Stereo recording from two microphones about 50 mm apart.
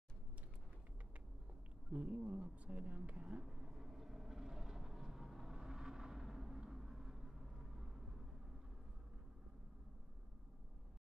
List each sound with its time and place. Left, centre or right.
1.9 s speech: right
3.1 s a sound: right
3.4 s vehicle: centre